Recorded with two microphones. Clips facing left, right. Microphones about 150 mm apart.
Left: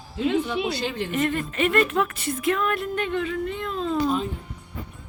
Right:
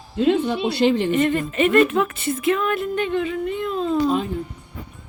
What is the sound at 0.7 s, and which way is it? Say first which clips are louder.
Speech: right 10 dB; 80° right.